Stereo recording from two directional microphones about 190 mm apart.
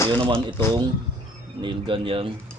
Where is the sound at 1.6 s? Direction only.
25° right (ahead or behind).